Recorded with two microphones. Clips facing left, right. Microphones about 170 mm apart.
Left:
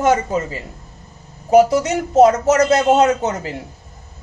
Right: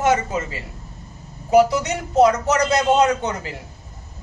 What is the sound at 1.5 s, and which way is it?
A man's voice, 40° left (ahead or behind).